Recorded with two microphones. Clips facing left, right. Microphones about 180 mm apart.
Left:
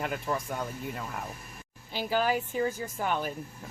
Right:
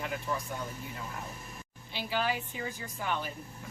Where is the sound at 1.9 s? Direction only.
45° left (ahead or behind).